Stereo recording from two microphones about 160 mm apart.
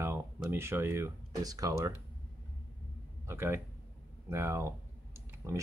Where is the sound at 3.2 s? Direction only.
15° right (ahead or behind).